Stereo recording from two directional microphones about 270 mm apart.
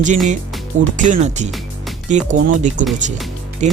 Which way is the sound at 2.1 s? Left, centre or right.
Right.